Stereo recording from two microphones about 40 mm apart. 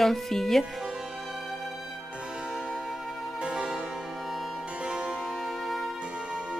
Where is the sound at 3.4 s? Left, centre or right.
Centre.